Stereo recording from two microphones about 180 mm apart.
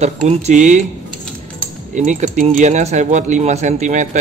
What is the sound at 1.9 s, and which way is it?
Speech, 40° right (ahead or behind).